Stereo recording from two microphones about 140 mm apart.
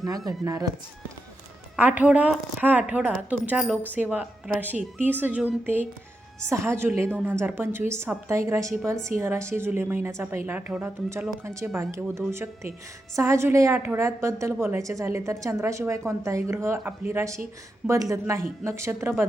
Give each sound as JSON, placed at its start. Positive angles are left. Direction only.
{"t": 1.7, "sound": "a woman's voice", "side_deg": -10}